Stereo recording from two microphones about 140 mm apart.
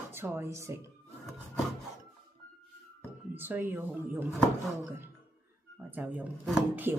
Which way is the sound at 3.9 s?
5° right (ahead or behind).